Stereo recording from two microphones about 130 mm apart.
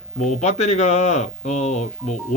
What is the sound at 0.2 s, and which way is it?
A man's voice, 60° left (ahead or behind).